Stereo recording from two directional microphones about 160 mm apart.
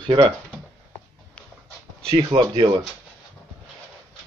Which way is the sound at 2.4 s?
25° right (ahead or behind).